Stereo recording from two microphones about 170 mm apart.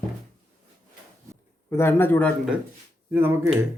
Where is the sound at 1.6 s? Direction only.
15° left (ahead or behind).